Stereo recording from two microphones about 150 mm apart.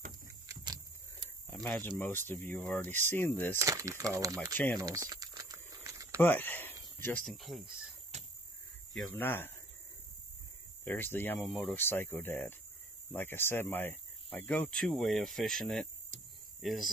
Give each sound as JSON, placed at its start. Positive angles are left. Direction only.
{"t": 1.5, "sound": "speech", "side_deg": 10}
{"t": 3.5, "sound": "speech", "side_deg": -20}
{"t": 4.7, "sound": "crumpling", "side_deg": -25}
{"t": 6.1, "sound": "speech", "side_deg": 10}
{"t": 8.1, "sound": "a sound", "side_deg": -50}
{"t": 8.9, "sound": "speech", "side_deg": 10}
{"t": 10.8, "sound": "speech", "side_deg": 15}